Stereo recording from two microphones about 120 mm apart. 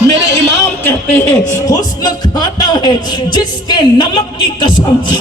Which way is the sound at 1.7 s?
35° left (ahead or behind).